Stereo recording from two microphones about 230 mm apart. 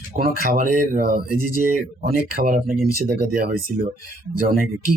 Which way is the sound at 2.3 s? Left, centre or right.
Right.